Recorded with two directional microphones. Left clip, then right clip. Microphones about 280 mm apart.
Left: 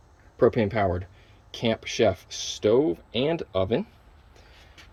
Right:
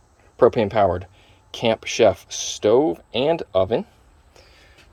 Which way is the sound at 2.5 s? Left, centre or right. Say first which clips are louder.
Right 5 dB; right.